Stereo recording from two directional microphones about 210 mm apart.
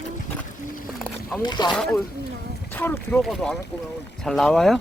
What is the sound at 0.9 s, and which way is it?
Wild animals, centre (ahead or behind).